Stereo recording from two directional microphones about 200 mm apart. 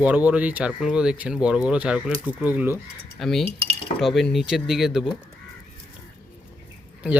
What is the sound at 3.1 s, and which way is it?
Cutlery, centre (ahead or behind).